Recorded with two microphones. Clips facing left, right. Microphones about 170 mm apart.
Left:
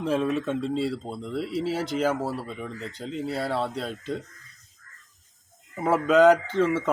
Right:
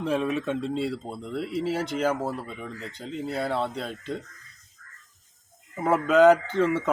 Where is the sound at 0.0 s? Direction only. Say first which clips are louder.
Left 1 dB; centre (ahead or behind).